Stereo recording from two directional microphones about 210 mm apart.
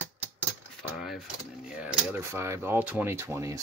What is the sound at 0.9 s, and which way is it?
Speech, centre (ahead or behind).